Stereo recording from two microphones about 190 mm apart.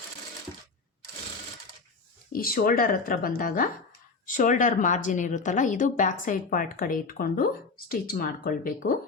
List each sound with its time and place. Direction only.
2.3 s a woman's voice: 50° left (ahead or behind)